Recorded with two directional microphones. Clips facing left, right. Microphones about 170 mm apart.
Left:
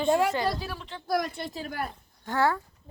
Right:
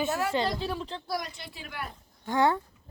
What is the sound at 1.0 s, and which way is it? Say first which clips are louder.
Speech: left 12 dB; 55° left (ahead or behind).